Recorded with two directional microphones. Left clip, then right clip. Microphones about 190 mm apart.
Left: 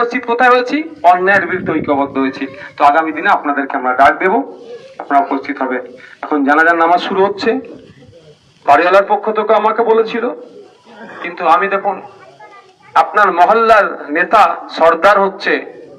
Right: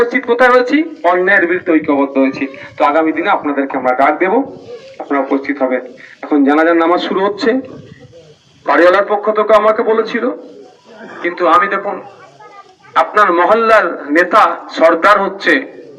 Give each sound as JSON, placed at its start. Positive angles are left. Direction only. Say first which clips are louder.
{"t": 0.1, "sound": "a man's voice", "louder": "right 1 dB", "side_deg": 65}
{"t": 8.7, "sound": "a man's voice", "louder": "even", "side_deg": 60}
{"t": 13.1, "sound": "a man's voice", "louder": "even", "side_deg": 70}